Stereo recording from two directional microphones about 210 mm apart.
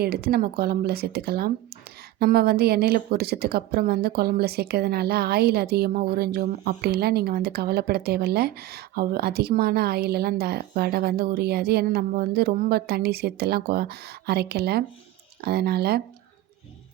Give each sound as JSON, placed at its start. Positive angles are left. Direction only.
{"t": 0.0, "sound": "a woman's voice", "side_deg": -50}